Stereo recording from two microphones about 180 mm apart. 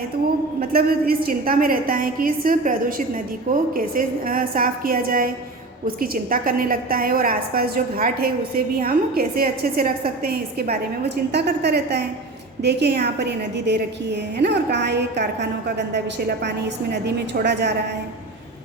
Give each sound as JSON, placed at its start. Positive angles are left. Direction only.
{"t": 0.6, "sound": "a woman's voice", "side_deg": -60}
{"t": 11.3, "sound": "a woman's voice", "side_deg": -70}